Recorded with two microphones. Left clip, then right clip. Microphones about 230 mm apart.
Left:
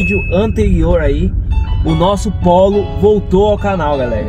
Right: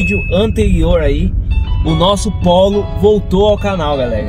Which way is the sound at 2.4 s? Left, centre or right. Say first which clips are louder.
Left 1 dB; centre.